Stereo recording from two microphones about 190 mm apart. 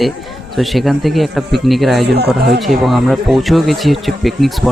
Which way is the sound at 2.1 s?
60° right (ahead or behind).